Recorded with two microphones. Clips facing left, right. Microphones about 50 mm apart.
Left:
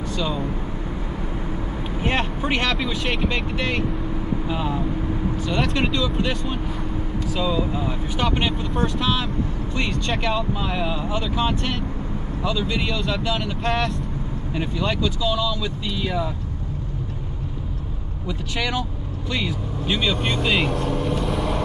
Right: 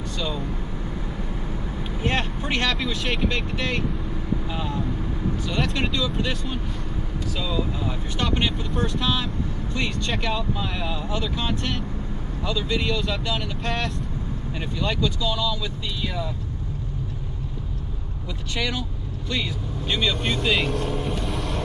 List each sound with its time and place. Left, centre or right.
2.0 s speech: centre
18.6 s speech: centre